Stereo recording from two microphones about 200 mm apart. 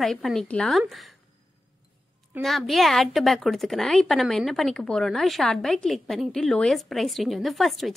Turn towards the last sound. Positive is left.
turn(degrees=0)  # may be behind; listen again after turning